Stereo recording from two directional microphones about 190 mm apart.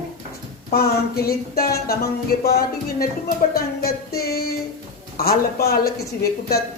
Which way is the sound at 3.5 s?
55° left (ahead or behind).